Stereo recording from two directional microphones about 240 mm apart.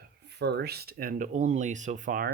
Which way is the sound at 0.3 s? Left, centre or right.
Right.